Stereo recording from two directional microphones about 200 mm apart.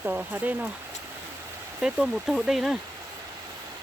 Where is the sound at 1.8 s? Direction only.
5° right (ahead or behind).